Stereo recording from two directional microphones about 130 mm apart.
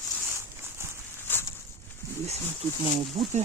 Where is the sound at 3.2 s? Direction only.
50° right (ahead or behind).